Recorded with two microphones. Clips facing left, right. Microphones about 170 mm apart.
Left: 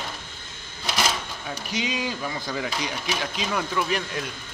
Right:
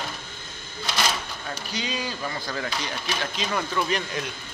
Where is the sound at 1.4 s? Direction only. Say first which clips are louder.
Left 5 dB; 15° left (ahead or behind).